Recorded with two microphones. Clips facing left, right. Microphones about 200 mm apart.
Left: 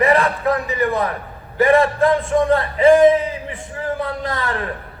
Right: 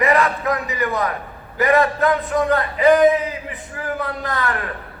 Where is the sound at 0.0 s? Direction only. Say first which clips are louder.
Left 2 dB; 30° left (ahead or behind).